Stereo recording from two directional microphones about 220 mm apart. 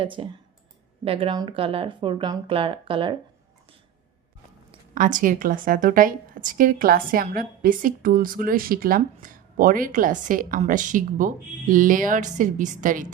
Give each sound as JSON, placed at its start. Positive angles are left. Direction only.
{"t": 0.0, "sound": "speech", "side_deg": -25}
{"t": 4.9, "sound": "a woman's voice", "side_deg": -35}